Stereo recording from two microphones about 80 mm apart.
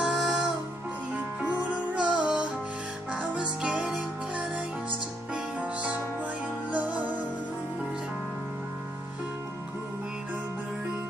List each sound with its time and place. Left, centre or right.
0.0 s music: centre
1.1 s music: centre
5.3 s music: centre